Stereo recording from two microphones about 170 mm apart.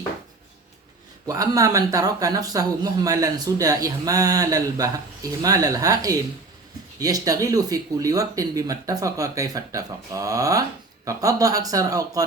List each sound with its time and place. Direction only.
1.3 s speech: 20° right (ahead or behind)